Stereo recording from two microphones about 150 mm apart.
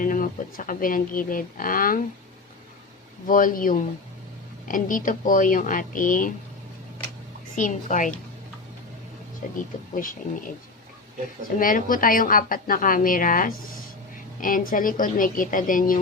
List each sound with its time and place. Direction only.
0.0 s speech: 70° left (ahead or behind)
3.2 s speech: 65° left (ahead or behind)
7.5 s speech: 60° left (ahead or behind)
9.6 s speech: 65° left (ahead or behind)
11.4 s speech: 65° left (ahead or behind)